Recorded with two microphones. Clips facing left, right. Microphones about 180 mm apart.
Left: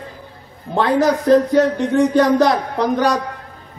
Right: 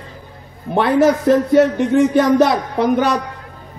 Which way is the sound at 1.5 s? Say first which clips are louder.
Right 2 dB; 20° right (ahead or behind).